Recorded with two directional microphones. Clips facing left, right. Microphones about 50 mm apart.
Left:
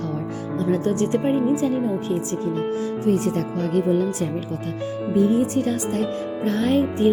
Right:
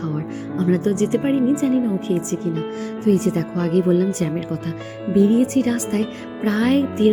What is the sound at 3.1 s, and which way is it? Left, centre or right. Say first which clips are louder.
Speech: right 4 dB; right.